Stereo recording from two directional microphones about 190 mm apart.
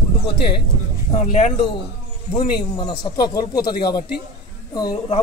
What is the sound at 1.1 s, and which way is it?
Speech, 35° left (ahead or behind).